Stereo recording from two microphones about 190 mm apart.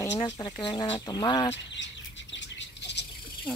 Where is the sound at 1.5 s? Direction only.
70° left (ahead or behind).